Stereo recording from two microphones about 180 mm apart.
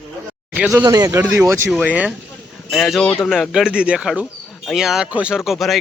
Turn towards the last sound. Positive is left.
turn(degrees=0)  # may be behind; listen again after turning